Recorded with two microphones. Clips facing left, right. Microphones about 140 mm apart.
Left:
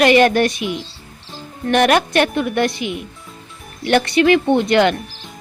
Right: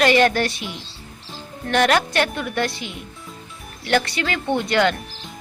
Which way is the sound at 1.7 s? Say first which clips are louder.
Left 4 dB; 20° left (ahead or behind).